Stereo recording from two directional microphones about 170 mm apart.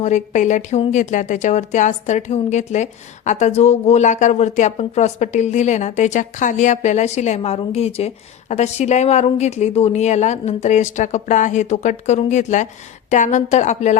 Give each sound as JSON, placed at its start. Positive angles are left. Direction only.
{"t": 0.0, "sound": "speech", "side_deg": 45}